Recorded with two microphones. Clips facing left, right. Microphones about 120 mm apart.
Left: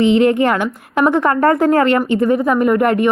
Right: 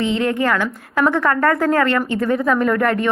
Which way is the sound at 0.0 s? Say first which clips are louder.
Left 7 dB; 20° left (ahead or behind).